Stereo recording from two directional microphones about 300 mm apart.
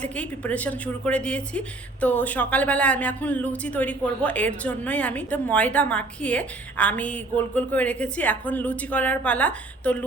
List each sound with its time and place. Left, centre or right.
0.0 s a woman's voice: centre